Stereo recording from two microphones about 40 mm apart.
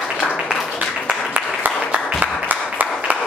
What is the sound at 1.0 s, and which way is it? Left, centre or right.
Applause, right.